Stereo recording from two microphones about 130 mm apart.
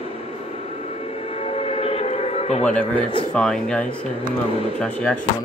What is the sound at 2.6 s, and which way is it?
Speech, 10° left (ahead or behind).